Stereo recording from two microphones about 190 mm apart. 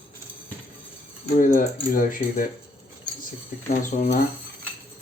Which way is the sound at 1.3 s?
50° left (ahead or behind).